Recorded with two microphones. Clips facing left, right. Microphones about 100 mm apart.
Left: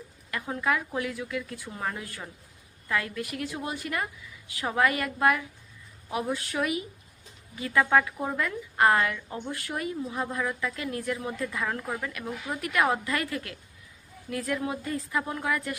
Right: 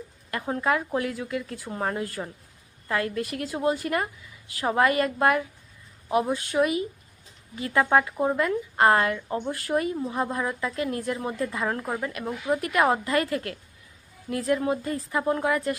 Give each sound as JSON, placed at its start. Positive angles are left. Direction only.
{"t": 0.3, "sound": "a woman's voice", "side_deg": -35}